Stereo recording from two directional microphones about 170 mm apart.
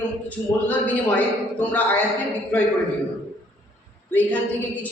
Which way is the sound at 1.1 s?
10° left (ahead or behind).